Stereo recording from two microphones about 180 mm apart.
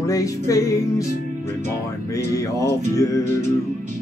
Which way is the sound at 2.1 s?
20° left (ahead or behind).